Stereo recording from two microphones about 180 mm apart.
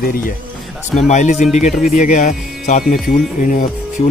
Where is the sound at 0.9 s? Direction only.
40° left (ahead or behind).